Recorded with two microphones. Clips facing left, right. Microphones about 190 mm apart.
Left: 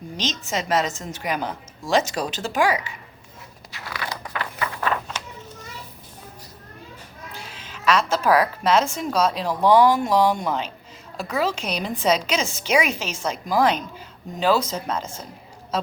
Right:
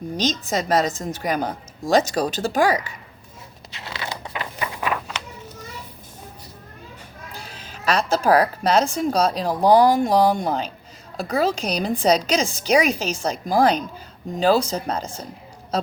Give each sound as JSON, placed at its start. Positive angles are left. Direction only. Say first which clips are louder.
{"t": 0.2, "sound": "speech", "louder": "right 4 dB", "side_deg": -40}
{"t": 3.7, "sound": "a sound", "louder": "even", "side_deg": -25}
{"t": 7.4, "sound": "a woman's voice", "louder": "left 1 dB", "side_deg": -40}